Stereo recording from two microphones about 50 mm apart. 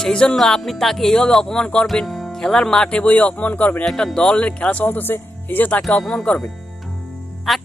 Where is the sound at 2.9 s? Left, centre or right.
Left.